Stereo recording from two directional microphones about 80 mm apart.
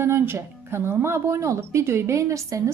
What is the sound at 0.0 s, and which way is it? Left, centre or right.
A woman's voice, right.